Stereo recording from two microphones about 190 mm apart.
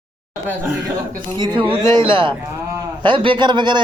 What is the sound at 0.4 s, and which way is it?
Speech, 10° right (ahead or behind).